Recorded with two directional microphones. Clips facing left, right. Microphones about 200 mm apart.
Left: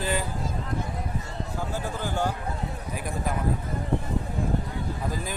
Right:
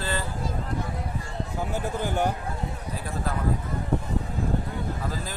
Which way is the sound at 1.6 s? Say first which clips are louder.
Right 3 dB; 15° right (ahead or behind).